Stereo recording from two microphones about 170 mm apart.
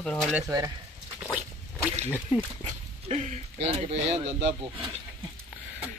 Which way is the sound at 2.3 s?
10° right (ahead or behind).